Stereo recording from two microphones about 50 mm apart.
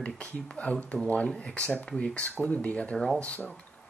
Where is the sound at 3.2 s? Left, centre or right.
Left.